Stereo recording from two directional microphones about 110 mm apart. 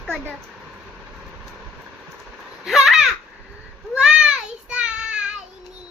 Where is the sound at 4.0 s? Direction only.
10° right (ahead or behind).